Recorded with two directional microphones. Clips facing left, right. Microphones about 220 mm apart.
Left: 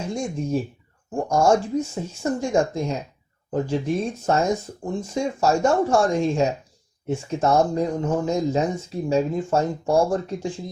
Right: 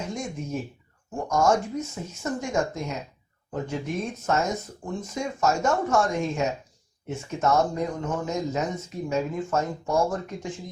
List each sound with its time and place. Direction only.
0.1 s speech: 30° left (ahead or behind)